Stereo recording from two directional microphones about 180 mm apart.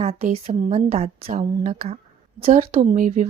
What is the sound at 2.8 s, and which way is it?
Speech, 40° right (ahead or behind).